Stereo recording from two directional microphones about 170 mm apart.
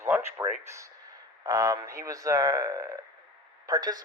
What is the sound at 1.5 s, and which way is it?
Speech, 20° right (ahead or behind).